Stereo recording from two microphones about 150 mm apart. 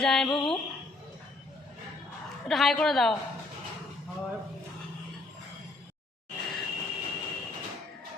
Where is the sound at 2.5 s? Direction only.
Centre (ahead or behind).